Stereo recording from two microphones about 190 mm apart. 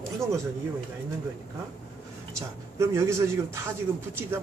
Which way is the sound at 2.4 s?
15° right (ahead or behind).